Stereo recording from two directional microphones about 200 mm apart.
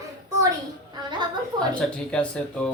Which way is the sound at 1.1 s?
20° right (ahead or behind).